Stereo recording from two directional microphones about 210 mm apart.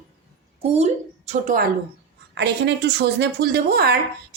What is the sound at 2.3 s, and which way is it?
Speech, 55° right (ahead or behind).